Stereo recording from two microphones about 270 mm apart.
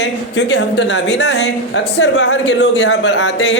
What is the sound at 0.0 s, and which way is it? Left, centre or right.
A woman's voice, left.